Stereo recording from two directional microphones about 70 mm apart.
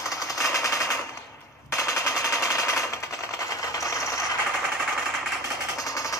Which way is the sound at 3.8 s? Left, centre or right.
Left.